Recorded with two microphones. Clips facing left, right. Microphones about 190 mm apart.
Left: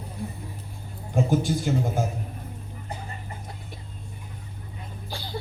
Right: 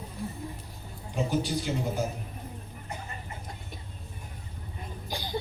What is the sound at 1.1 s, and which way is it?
Speech, 50° left (ahead or behind).